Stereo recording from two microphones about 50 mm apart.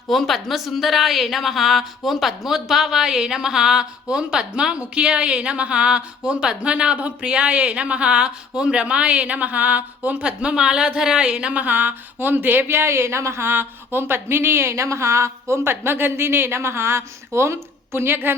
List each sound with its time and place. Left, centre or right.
0.1 s a woman's voice: centre; by 10.2 s right
10.2 s speech: centre; by 18.3 s right